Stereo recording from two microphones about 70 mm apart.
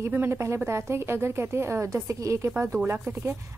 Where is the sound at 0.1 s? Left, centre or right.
Right.